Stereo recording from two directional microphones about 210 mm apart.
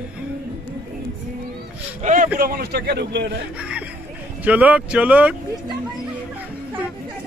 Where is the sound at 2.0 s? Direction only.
35° right (ahead or behind).